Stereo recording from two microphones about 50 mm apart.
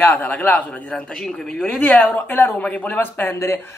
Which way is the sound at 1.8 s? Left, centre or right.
Left.